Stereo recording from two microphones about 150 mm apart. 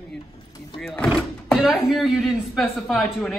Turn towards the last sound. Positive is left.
turn(degrees=0)  # may be behind; listen again after turning